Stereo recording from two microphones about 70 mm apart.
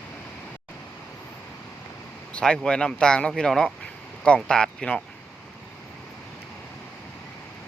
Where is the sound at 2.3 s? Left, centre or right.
Centre.